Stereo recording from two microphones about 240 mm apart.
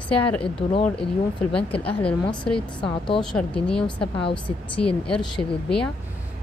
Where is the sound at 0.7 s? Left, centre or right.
Left.